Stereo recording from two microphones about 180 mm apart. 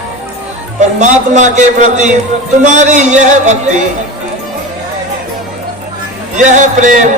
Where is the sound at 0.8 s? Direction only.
40° right (ahead or behind).